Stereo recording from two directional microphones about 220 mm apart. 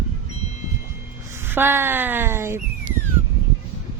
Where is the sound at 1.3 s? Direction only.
10° right (ahead or behind).